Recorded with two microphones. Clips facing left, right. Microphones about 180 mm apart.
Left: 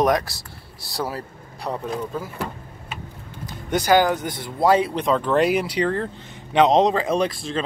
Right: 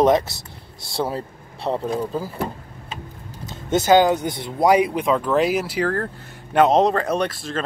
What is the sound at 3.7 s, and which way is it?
Speech, 25° right (ahead or behind).